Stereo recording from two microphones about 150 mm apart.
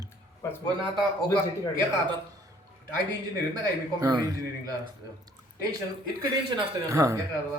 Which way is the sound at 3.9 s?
25° right (ahead or behind).